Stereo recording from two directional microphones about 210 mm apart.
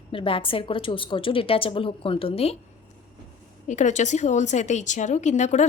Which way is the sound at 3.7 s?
35° left (ahead or behind).